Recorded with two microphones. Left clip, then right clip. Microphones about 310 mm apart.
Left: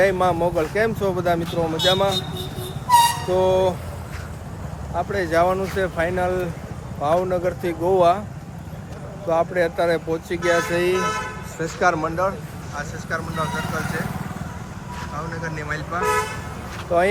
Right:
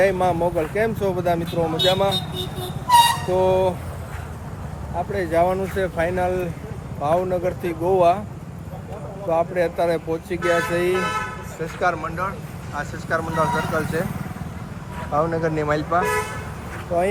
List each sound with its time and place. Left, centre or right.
0.0 s speech: centre
3.2 s speech: centre
4.9 s speech: centre
9.3 s speech: centre
11.6 s speech: left
12.0 s speech: centre
12.7 s speech: centre
15.3 s speech: centre
16.9 s speech: centre